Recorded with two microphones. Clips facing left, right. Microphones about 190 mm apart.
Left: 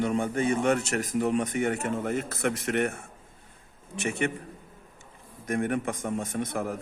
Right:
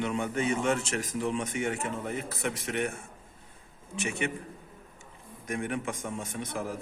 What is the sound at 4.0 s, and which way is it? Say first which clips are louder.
Speech: left 3 dB; 55° left (ahead or behind).